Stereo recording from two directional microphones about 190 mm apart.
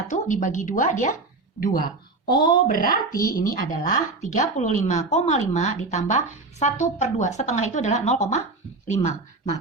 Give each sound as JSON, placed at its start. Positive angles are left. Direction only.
{"t": 0.1, "sound": "a woman's voice", "side_deg": 40}
{"t": 2.3, "sound": "a woman's voice", "side_deg": 25}
{"t": 2.6, "sound": "a woman's voice", "side_deg": 50}